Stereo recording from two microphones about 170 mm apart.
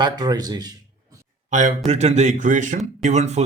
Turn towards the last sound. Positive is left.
turn(degrees=-40)  # may be behind; listen again after turning